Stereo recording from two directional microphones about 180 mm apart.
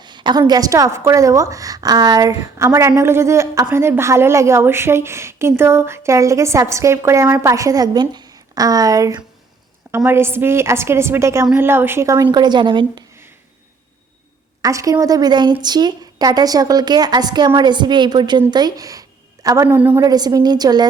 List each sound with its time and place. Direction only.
0.0 s a woman's voice: 25° right (ahead or behind)
14.6 s a woman's voice: 20° right (ahead or behind)
19.9 s a woman's voice: 20° right (ahead or behind)